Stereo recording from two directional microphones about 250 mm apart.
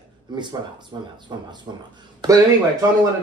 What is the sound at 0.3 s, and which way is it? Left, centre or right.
Speech, centre.